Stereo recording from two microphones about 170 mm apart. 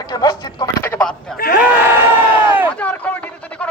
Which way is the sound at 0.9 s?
5° left (ahead or behind).